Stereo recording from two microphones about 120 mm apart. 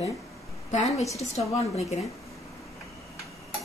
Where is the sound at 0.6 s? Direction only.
70° left (ahead or behind).